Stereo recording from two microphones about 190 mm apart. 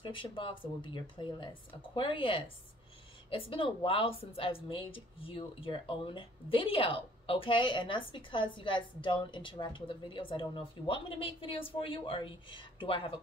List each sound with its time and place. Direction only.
0.0 s speech: 25° left (ahead or behind)